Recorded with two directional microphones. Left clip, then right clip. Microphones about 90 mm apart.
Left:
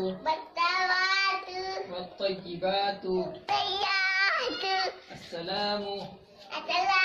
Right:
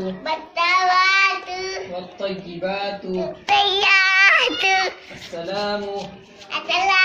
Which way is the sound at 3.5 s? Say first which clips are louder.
Right 12 dB; 10° left (ahead or behind).